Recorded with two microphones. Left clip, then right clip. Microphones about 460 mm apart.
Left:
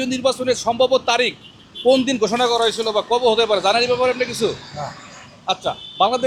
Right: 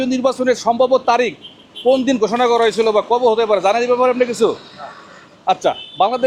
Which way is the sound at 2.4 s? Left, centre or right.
Centre.